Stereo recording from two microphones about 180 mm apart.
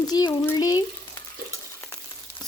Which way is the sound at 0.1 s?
20° left (ahead or behind).